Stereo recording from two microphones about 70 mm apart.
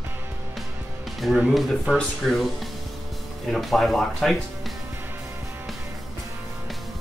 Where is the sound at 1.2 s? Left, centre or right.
Centre.